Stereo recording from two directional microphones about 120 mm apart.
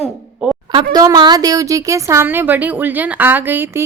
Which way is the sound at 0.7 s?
40° right (ahead or behind).